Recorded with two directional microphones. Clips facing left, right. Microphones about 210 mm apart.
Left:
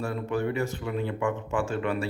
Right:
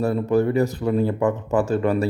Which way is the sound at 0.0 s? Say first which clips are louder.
Right 9 dB; 40° right (ahead or behind).